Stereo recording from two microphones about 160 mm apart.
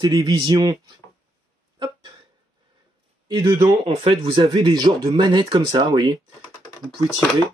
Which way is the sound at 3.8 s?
35° right (ahead or behind).